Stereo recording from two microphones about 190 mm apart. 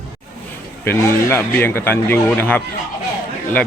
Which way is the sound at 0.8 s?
10° left (ahead or behind).